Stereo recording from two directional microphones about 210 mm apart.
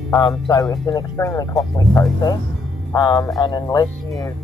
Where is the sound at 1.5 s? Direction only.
Centre (ahead or behind).